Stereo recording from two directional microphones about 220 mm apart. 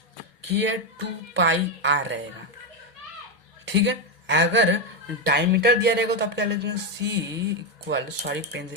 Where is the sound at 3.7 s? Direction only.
55° right (ahead or behind).